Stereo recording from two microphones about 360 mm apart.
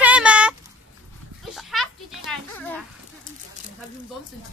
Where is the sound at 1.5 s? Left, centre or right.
Centre.